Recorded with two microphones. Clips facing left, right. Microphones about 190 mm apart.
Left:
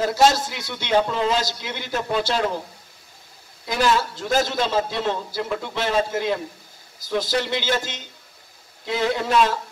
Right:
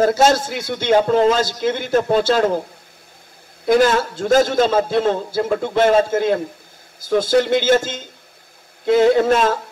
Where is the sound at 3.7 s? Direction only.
50° right (ahead or behind).